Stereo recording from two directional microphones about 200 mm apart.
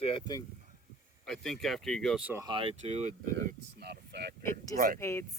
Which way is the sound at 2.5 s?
25° right (ahead or behind).